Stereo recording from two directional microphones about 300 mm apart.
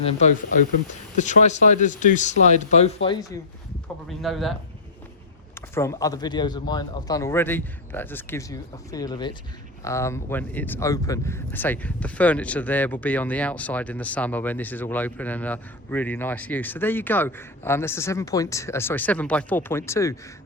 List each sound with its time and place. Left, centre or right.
1.2 s speech: left
4.2 s speech: centre
5.5 s speech: centre